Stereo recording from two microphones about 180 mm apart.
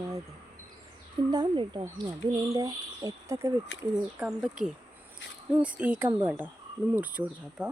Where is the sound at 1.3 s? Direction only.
25° right (ahead or behind).